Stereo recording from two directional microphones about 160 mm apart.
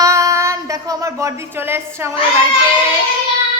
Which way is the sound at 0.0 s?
20° right (ahead or behind).